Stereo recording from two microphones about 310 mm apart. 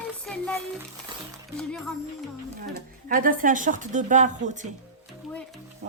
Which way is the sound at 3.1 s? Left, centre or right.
Right.